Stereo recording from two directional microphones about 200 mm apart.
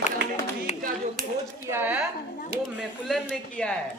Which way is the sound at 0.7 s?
35° left (ahead or behind).